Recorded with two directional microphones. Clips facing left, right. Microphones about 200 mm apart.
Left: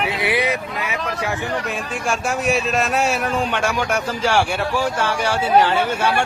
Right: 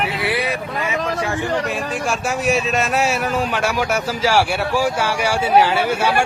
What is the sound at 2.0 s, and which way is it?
Speech, centre (ahead or behind).